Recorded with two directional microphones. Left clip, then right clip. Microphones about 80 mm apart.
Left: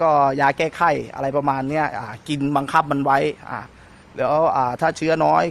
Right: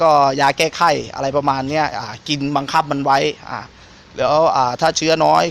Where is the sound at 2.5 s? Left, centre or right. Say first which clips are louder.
Right 1 dB; left.